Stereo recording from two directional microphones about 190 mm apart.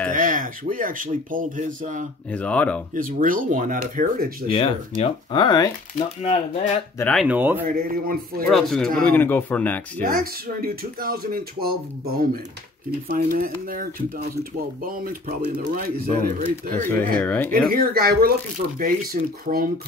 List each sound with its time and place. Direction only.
0.1 s speech: 45° right (ahead or behind)
2.3 s speech: 5° left (ahead or behind)
2.9 s speech: 45° right (ahead or behind)
4.5 s speech: 30° left (ahead or behind)
5.9 s speech: 35° left (ahead or behind)
7.0 s speech: 5° left (ahead or behind)
7.2 s speech: 10° right (ahead or behind)
7.6 s speech: 50° right (ahead or behind)
8.5 s speech: centre (ahead or behind)
10.0 s speech: 50° right (ahead or behind)
16.4 s speech: 10° left (ahead or behind)
17.5 s speech: 50° right (ahead or behind)
19.4 s speech: 50° right (ahead or behind)